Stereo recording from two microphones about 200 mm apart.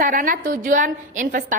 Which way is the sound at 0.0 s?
45° right (ahead or behind).